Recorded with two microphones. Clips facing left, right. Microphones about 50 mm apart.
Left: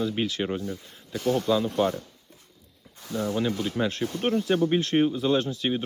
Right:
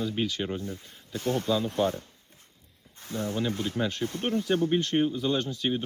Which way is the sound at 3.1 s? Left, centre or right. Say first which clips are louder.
Left 3 dB; left.